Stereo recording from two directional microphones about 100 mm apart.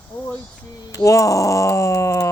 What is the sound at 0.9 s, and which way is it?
Speech, 35° left (ahead or behind).